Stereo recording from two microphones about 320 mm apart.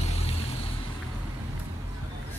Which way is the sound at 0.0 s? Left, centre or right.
Centre.